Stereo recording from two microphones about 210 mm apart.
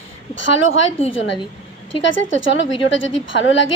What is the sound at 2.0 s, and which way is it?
Speech, 65° left (ahead or behind).